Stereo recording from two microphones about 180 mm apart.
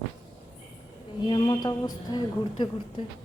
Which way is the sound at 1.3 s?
25° left (ahead or behind).